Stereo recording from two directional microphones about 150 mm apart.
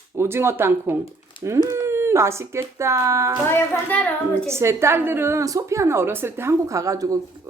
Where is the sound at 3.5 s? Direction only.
10° left (ahead or behind).